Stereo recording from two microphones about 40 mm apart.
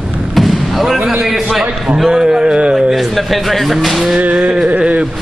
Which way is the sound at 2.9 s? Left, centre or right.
Centre.